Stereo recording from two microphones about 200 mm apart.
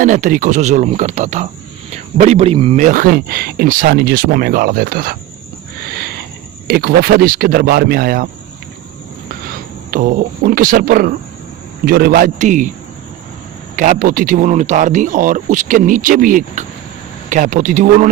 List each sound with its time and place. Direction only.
0.0 s speech: 40° right (ahead or behind)
5.8 s a sound: 50° right (ahead or behind)
6.7 s speech: 50° right (ahead or behind)
9.3 s speech: 45° right (ahead or behind)
13.7 s speech: 40° right (ahead or behind)